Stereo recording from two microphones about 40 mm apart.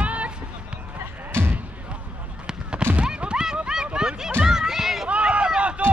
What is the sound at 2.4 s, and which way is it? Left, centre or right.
Fireworks, centre.